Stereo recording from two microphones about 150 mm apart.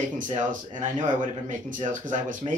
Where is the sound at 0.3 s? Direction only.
60° right (ahead or behind).